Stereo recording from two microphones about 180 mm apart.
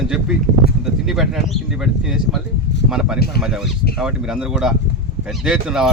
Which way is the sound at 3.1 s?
60° left (ahead or behind).